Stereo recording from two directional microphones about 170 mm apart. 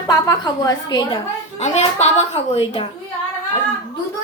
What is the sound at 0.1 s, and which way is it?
Speech, 20° left (ahead or behind).